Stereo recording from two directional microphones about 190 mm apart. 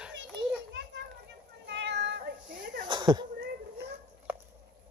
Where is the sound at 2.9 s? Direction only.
25° right (ahead or behind).